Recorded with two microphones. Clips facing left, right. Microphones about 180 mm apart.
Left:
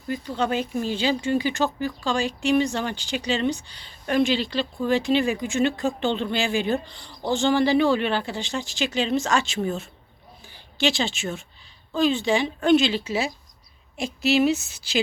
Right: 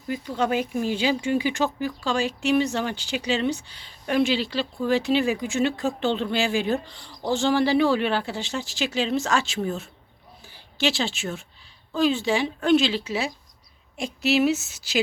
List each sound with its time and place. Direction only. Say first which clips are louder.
0.1 s speech: right 1 dB; 10° right (ahead or behind)
14.6 s speech: even; 85° right